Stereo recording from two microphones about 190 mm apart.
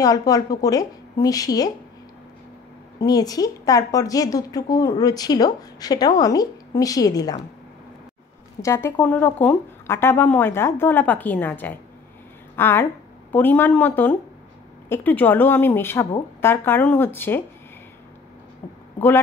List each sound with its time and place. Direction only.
0.0 s a woman's voice: 20° left (ahead or behind)
3.0 s a woman's voice: 20° left (ahead or behind)
8.5 s a woman's voice: 15° left (ahead or behind)
18.9 s speech: 10° left (ahead or behind)